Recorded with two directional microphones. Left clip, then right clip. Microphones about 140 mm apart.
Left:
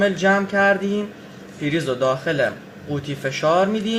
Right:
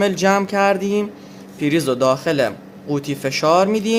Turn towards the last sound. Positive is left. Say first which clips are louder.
# right 3 dB
turn(degrees=-50)  # may be behind; listen again after turning